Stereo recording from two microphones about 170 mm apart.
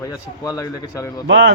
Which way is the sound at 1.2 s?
90° right.